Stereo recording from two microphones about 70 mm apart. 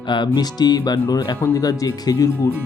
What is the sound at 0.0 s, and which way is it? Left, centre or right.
Speech, left.